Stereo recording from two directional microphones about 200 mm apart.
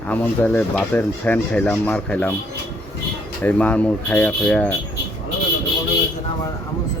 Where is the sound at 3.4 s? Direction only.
5° left (ahead or behind).